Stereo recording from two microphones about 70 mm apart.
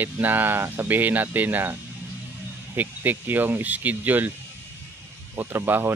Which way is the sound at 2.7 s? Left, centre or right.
Right.